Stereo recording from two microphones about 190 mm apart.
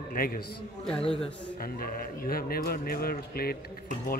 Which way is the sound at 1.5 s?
50° left (ahead or behind).